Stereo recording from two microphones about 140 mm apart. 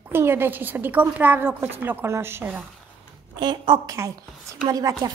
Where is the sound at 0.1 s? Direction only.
15° right (ahead or behind).